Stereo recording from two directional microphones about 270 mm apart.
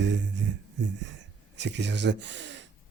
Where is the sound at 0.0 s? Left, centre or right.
Right.